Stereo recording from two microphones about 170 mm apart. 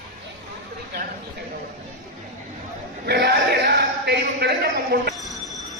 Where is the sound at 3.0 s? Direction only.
75° right (ahead or behind).